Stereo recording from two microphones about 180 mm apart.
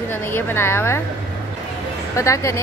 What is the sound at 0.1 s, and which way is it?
Speech, 10° left (ahead or behind).